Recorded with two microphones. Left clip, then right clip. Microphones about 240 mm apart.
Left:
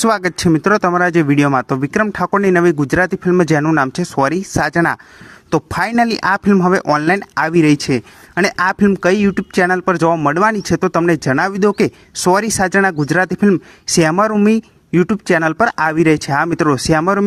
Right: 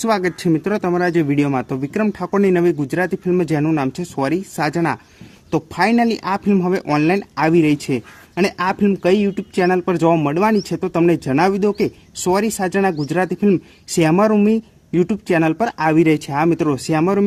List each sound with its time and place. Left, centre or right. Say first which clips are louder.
0.0 s speech: left 3 dB; left